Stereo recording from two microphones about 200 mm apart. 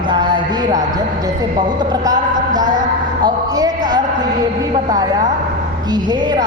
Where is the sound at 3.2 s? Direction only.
20° right (ahead or behind).